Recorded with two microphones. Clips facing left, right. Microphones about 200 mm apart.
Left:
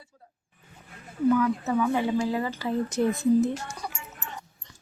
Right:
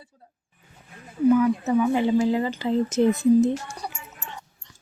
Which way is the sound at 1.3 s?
15° right (ahead or behind).